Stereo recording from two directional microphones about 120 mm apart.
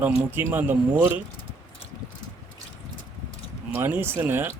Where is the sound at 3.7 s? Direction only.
20° right (ahead or behind).